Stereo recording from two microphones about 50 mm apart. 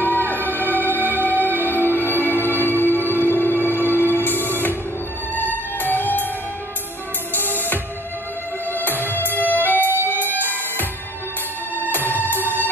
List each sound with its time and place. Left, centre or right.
0.0 s music: left
7.3 s music: left
9.0 s music: left
11.9 s music: left